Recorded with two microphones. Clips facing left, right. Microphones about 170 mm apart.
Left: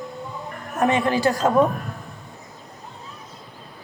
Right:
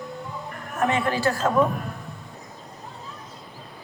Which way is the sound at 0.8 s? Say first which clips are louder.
Left 4 dB; 20° left (ahead or behind).